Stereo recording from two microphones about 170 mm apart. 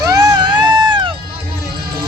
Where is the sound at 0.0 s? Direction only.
20° right (ahead or behind).